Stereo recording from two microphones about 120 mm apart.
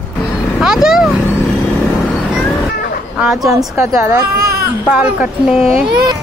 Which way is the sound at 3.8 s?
20° right (ahead or behind).